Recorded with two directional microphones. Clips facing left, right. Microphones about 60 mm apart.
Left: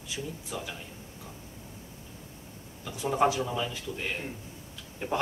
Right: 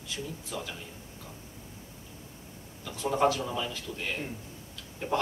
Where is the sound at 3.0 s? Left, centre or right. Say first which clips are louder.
Even; centre.